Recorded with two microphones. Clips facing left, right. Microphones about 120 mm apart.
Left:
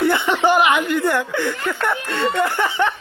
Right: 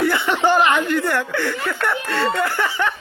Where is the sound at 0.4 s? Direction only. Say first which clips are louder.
Even; 15° left (ahead or behind).